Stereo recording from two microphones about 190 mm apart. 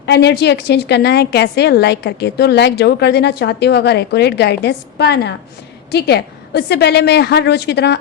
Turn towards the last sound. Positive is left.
turn(degrees=60)  # may be behind; listen again after turning